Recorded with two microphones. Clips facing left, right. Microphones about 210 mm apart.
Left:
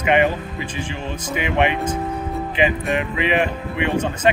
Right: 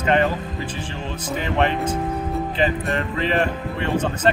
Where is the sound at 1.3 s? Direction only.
15° left (ahead or behind).